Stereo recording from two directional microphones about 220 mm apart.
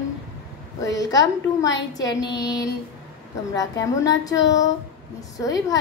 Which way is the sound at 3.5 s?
15° left (ahead or behind).